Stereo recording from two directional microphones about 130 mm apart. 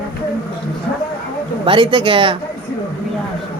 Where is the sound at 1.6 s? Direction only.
40° right (ahead or behind).